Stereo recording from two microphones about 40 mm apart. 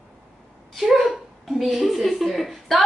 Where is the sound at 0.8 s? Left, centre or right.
Centre.